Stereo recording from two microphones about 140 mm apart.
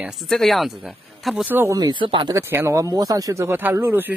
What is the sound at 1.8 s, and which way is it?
Speech, 35° right (ahead or behind).